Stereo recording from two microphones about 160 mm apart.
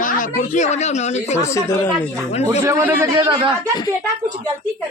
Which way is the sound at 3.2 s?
25° right (ahead or behind).